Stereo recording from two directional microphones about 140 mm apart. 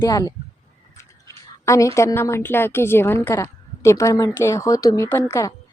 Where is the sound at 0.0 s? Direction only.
25° left (ahead or behind).